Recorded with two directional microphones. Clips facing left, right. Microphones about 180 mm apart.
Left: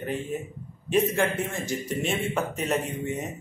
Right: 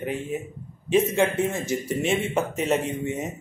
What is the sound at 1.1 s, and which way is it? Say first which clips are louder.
Speech: right 4 dB; 20° right (ahead or behind).